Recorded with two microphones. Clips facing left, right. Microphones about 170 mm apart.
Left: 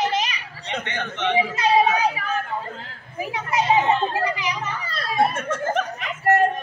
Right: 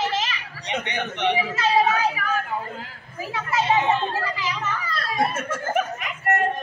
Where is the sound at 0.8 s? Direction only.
15° right (ahead or behind).